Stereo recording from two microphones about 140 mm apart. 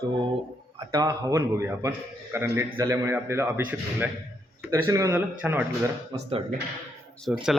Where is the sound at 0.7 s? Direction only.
25° right (ahead or behind).